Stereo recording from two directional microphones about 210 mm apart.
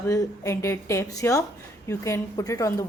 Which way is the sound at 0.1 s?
15° left (ahead or behind).